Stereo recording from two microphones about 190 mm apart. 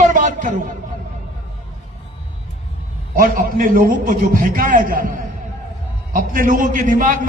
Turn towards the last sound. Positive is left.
turn(degrees=-45)  # may be behind; listen again after turning